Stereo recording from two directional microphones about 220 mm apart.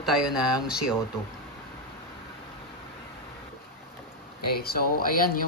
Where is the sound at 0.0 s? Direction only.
Centre (ahead or behind).